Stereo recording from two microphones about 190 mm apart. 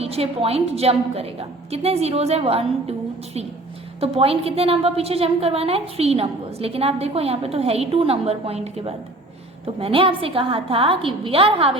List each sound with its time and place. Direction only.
0.0 s a woman's voice: 30° right (ahead or behind)
4.0 s a woman's voice: 30° right (ahead or behind)